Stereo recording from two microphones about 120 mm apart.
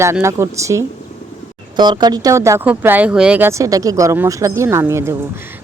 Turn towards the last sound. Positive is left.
turn(degrees=-25)  # may be behind; listen again after turning